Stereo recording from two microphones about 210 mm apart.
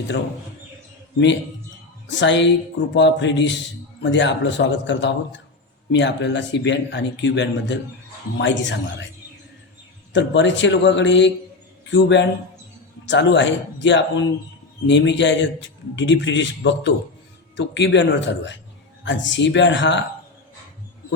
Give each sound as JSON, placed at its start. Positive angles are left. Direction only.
{"t": 2.0, "sound": "speech", "side_deg": 60}
{"t": 10.1, "sound": "speech", "side_deg": 60}